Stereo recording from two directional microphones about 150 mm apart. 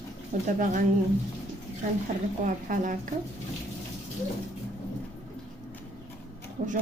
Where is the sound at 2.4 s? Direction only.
60° right (ahead or behind).